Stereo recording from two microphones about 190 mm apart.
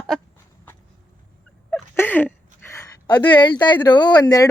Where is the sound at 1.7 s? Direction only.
10° left (ahead or behind).